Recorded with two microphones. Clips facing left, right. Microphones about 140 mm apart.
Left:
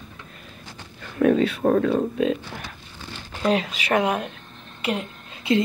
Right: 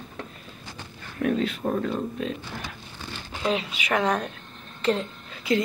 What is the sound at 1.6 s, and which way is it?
Speech, 85° left.